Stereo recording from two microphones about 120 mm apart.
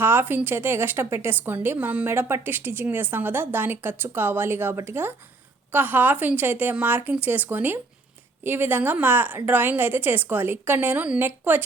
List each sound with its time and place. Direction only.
0.0 s speech: 20° right (ahead or behind)